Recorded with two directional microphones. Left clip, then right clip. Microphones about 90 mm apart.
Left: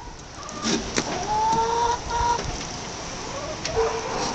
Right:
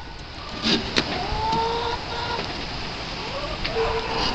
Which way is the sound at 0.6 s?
Centre (ahead or behind).